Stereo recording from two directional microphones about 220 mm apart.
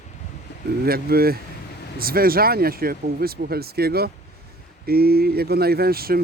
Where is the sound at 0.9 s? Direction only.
45° right (ahead or behind).